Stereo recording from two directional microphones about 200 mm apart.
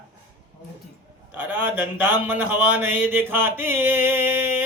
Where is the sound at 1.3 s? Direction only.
10° right (ahead or behind).